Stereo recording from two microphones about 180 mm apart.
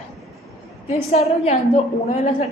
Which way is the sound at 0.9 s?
35° left (ahead or behind).